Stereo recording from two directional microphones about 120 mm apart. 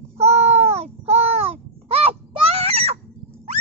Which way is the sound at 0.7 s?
60° right (ahead or behind).